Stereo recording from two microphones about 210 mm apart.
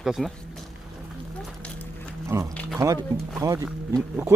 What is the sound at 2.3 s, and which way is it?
Speech, 15° right (ahead or behind).